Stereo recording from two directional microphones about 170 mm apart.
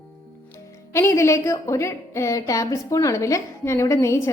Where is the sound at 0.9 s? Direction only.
15° left (ahead or behind).